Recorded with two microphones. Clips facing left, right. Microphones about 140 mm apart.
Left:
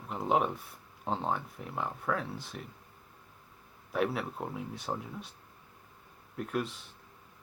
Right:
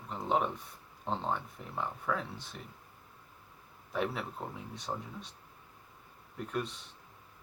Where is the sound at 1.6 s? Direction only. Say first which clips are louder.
Left 4 dB; 5° left (ahead or behind).